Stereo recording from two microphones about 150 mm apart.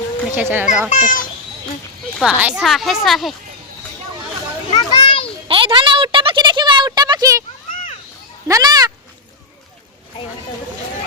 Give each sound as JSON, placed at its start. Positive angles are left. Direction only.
{"t": 0.3, "sound": "speech", "side_deg": -15}
{"t": 0.9, "sound": "a child's voice", "side_deg": 60}
{"t": 2.4, "sound": "a woman's voice", "side_deg": -5}
{"t": 4.7, "sound": "children playing", "side_deg": 30}
{"t": 5.5, "sound": "a sound", "side_deg": -35}
{"t": 8.4, "sound": "speech", "side_deg": -25}